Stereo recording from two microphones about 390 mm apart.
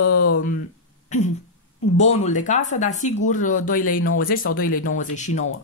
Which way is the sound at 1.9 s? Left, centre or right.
Centre.